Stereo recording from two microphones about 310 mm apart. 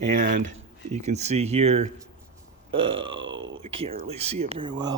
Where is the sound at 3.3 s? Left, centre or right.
Right.